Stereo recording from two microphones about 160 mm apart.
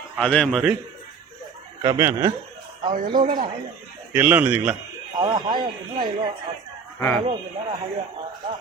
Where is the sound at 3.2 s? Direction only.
55° right (ahead or behind).